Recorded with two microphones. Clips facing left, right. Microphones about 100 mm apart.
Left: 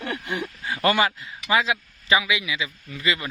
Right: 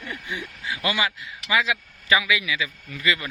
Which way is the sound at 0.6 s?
45° left (ahead or behind).